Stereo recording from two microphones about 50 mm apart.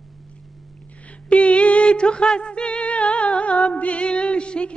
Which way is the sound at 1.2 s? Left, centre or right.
Left.